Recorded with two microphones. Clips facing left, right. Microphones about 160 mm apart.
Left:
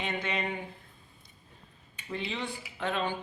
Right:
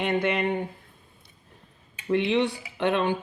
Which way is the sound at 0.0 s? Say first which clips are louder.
Right 9 dB; 60° right (ahead or behind).